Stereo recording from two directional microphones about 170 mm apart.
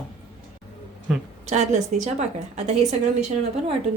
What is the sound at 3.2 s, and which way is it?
Speech, 40° right (ahead or behind).